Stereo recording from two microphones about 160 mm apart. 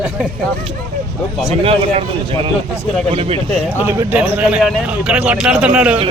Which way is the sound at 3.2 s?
35° right (ahead or behind).